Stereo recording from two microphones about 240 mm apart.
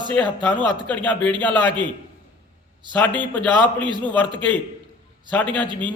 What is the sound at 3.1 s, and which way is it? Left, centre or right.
Speech, centre.